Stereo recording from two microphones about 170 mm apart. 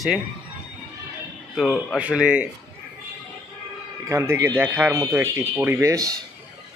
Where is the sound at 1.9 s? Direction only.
5° right (ahead or behind).